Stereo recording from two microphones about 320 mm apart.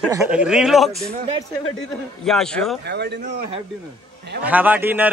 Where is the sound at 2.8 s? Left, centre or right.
Right.